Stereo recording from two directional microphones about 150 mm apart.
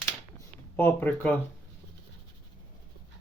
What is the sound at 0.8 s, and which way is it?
Speech, 10° left (ahead or behind).